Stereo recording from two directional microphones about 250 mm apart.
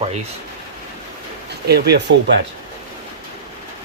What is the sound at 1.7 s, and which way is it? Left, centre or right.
Speech, right.